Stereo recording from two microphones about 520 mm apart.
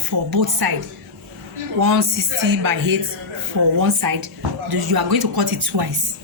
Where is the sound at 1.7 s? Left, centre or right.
Right.